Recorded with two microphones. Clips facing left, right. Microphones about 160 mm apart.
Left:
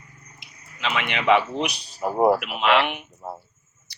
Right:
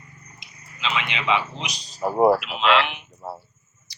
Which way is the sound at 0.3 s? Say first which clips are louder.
Left 4 dB; 55° left (ahead or behind).